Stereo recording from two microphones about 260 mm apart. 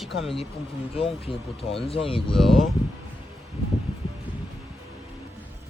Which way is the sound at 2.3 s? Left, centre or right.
Centre.